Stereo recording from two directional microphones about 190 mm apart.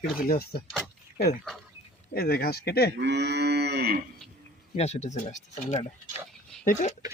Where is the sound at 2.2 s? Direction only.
55° left (ahead or behind).